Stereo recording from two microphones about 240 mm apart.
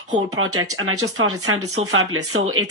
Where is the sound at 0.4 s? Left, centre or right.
Right.